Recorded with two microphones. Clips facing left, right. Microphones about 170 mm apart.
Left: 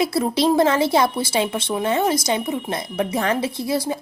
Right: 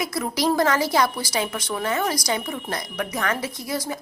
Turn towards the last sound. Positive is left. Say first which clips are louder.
# left 6 dB
turn(degrees=25)  # may be behind; listen again after turning